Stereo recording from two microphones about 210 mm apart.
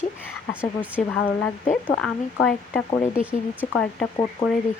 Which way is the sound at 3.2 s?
5° right (ahead or behind).